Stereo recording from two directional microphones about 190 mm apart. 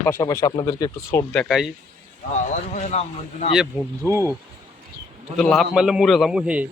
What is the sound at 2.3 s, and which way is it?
Speech, 35° left (ahead or behind).